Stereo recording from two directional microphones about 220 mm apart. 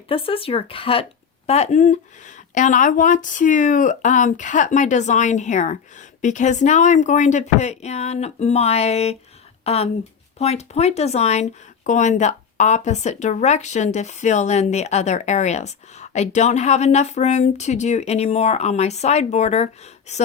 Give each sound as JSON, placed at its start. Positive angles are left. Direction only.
{"t": 0.1, "sound": "speech", "side_deg": 25}